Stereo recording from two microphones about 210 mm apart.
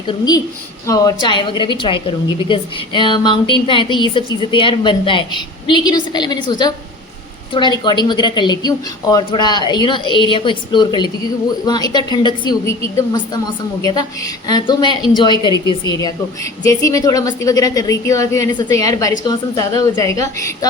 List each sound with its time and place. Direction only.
0.1 s a woman's voice: 20° left (ahead or behind)